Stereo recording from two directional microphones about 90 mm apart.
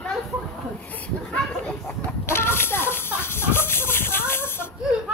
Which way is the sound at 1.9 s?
25° left (ahead or behind).